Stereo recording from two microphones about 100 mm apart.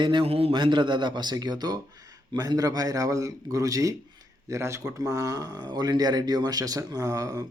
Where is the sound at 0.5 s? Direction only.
55° right (ahead or behind); by 7.4 s 35° right (ahead or behind).